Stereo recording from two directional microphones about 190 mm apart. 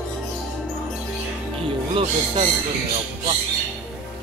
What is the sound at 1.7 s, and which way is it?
Speech, 30° right (ahead or behind).